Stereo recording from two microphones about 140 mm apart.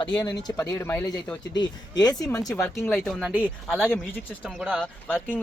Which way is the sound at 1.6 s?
30° left (ahead or behind).